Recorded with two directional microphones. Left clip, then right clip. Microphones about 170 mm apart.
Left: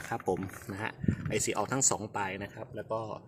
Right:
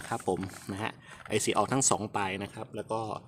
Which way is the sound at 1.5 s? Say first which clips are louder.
Right 5 dB; 30° right (ahead or behind).